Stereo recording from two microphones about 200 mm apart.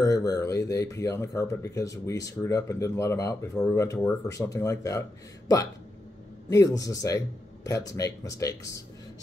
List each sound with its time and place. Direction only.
0.0 s speech: 15° left (ahead or behind)
6.5 s speech: 15° left (ahead or behind)